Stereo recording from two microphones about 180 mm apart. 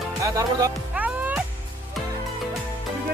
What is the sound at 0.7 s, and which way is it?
Music, 10° right (ahead or behind).